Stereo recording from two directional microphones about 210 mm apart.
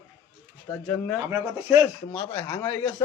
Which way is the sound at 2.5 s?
15° left (ahead or behind).